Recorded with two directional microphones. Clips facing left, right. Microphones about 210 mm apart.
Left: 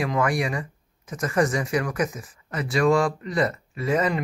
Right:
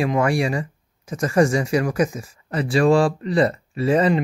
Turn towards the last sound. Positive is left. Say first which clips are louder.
# right 5 dB
turn(degrees=-30)  # may be behind; listen again after turning